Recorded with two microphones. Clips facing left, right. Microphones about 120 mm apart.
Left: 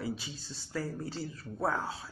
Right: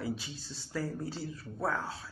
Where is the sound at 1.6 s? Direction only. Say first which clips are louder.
Left 2 dB; 15° left (ahead or behind).